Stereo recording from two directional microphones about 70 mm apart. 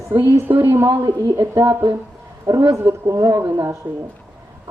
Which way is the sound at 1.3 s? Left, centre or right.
Right.